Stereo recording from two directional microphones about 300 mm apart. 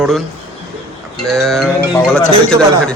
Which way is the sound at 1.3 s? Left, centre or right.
Centre.